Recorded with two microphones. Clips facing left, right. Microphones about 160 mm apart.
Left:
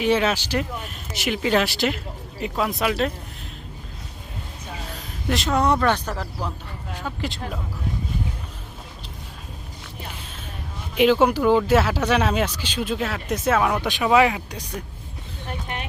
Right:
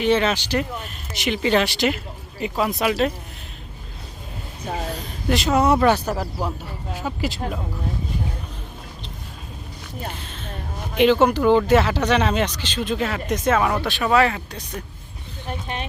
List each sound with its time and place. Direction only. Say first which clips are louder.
0.0 s speech: right 1 dB; 5° left (ahead or behind)
4.9 s speech: left 1 dB; centre (ahead or behind)
10.9 s speech: right 1 dB; 5° left (ahead or behind)
13.8 s speech: left 1 dB; 15° left (ahead or behind)
15.6 s music: right 3 dB; 25° right (ahead or behind)